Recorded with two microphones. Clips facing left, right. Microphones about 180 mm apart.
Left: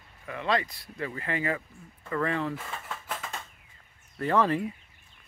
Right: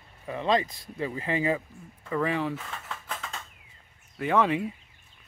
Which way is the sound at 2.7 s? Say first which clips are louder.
Left 1 dB; 5° left (ahead or behind).